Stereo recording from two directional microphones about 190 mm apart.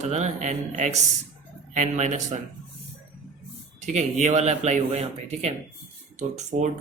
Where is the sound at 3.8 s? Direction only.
40° right (ahead or behind).